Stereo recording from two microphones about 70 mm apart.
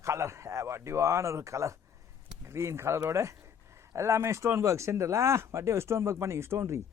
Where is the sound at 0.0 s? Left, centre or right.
Right.